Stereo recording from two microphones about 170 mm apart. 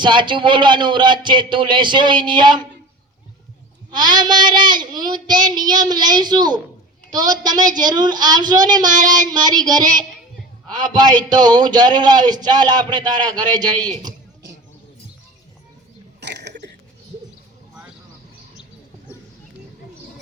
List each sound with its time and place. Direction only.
0.0 s speech: 25° right (ahead or behind)
3.9 s speech: 25° right (ahead or behind)
16.2 s a sound: 90° right